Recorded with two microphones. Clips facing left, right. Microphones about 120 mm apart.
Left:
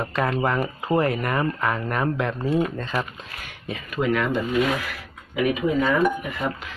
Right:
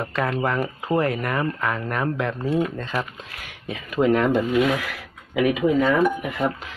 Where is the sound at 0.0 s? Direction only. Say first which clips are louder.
Left 1 dB; 10° left (ahead or behind).